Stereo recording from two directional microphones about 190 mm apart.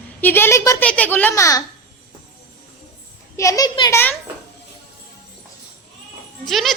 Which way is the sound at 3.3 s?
15° left (ahead or behind).